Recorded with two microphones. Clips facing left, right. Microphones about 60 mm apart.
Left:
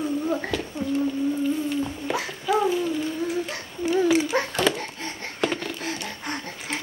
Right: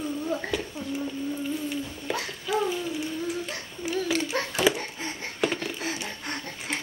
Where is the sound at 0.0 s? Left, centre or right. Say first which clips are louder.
Left 4 dB; centre.